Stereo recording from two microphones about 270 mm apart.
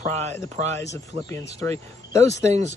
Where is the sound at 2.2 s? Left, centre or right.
Right.